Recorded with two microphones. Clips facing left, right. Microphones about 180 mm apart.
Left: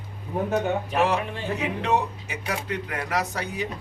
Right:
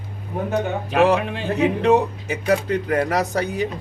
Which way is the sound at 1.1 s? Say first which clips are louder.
Right 5 dB; 85° right.